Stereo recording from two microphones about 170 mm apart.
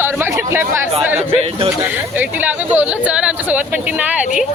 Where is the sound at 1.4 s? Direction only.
35° right (ahead or behind).